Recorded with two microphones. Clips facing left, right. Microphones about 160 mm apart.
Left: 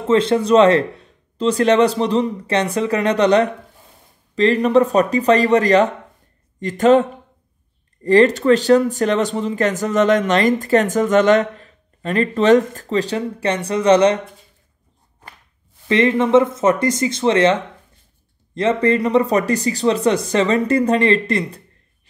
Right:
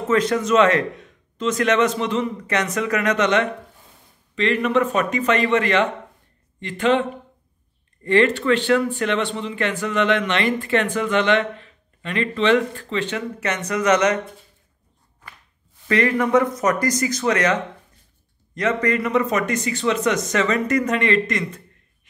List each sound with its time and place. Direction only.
0.1 s speech: 30° left (ahead or behind)
15.9 s speech: 25° left (ahead or behind)